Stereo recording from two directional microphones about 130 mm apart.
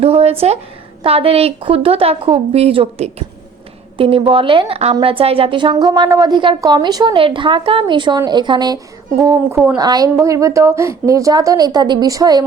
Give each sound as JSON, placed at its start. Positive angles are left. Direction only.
{"t": 0.0, "sound": "a woman's voice", "side_deg": -50}